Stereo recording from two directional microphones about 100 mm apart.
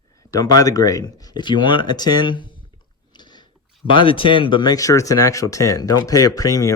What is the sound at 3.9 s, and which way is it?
Speech, 60° left (ahead or behind).